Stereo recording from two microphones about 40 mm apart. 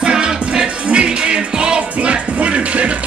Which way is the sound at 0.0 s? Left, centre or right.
Right.